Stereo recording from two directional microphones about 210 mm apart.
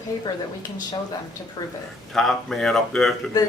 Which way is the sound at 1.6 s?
20° left (ahead or behind).